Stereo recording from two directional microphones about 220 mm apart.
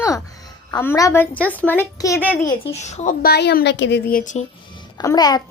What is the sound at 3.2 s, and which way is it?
Speech, 45° left (ahead or behind).